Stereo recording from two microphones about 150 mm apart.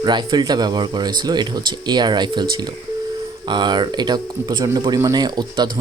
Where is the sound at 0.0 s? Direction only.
30° right (ahead or behind).